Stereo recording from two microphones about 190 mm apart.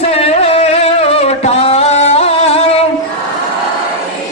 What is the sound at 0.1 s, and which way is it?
Music, 30° left (ahead or behind).